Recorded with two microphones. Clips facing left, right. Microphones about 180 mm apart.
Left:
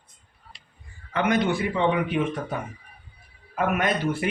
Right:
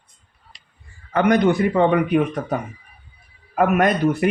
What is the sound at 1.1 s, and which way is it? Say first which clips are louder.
Speech: right 6 dB; 45° right (ahead or behind).